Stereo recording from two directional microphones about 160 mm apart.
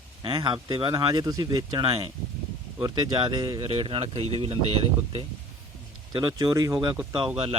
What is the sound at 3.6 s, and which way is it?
Speech, 35° right (ahead or behind).